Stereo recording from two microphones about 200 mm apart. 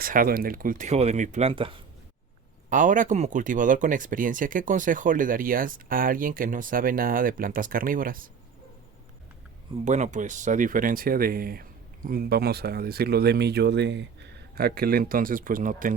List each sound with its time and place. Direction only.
0.0 s speech: 45° right (ahead or behind); by 1.8 s 25° right (ahead or behind)
2.6 s speech: 40° right (ahead or behind)
9.8 s speech: 35° right (ahead or behind)